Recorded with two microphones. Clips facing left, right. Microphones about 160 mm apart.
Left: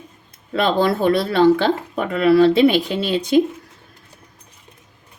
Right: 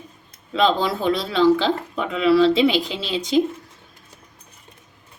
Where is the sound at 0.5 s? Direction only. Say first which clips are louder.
Left 2 dB; 60° left (ahead or behind).